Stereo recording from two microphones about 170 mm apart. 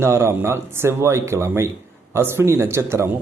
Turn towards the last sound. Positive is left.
turn(degrees=-15)  # may be behind; listen again after turning